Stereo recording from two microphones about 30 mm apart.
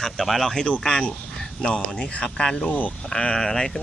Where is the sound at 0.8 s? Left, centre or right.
Left.